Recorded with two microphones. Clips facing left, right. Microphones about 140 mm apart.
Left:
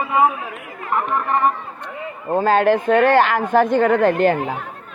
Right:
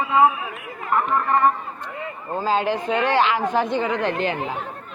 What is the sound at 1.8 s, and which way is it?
Speech, 60° left (ahead or behind).